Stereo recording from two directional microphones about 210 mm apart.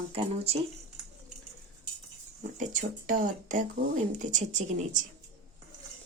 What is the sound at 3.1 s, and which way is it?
Speech, 40° right (ahead or behind).